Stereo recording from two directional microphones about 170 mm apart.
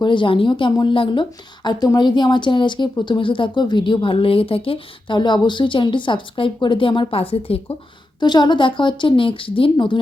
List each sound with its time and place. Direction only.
0.0 s speech: 30° left (ahead or behind)